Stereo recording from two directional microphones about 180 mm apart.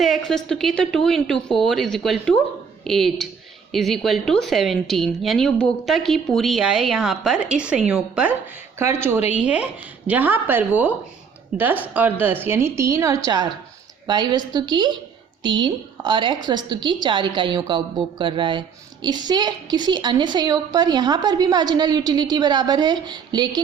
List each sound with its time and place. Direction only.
0.0 s speech: centre (ahead or behind)
9.4 s a woman's voice: 5° right (ahead or behind); by 23.6 s 25° right (ahead or behind)